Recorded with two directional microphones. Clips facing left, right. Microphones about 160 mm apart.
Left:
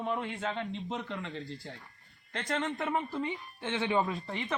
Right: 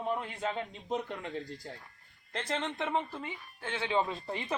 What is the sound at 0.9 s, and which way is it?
Speech, 40° right (ahead or behind).